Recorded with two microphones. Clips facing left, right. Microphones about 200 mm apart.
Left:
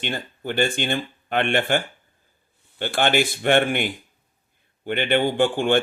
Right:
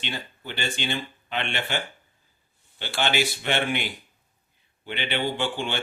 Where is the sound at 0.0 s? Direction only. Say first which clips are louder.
Left 6 dB; 50° left (ahead or behind).